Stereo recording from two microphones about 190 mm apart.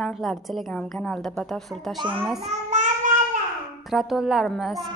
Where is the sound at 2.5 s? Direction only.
40° right (ahead or behind).